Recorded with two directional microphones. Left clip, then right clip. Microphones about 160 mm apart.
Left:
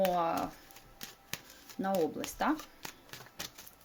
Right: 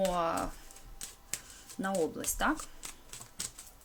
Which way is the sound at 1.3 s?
45° left (ahead or behind).